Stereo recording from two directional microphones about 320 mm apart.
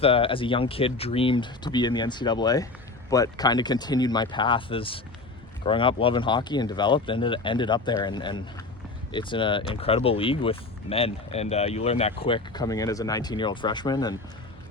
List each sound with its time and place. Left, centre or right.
0.0 s speech: centre